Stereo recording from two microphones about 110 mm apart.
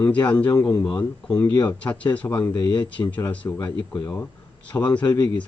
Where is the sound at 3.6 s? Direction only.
40° left (ahead or behind).